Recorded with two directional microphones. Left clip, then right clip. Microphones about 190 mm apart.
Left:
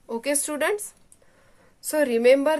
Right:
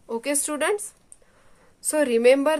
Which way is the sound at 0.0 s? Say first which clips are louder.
Even; 10° right (ahead or behind).